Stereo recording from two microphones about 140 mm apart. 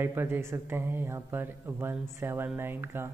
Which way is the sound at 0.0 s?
15° right (ahead or behind).